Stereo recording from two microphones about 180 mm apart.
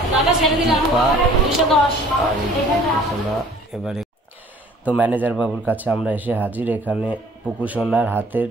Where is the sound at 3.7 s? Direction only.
Centre (ahead or behind).